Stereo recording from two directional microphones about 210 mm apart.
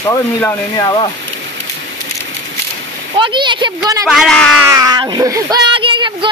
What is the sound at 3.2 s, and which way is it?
Speech, 20° right (ahead or behind).